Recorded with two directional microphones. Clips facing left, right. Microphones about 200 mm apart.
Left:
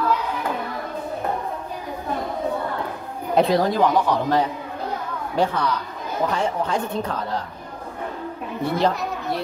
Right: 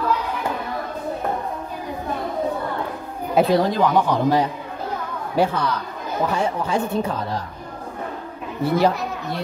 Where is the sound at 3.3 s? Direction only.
Centre (ahead or behind).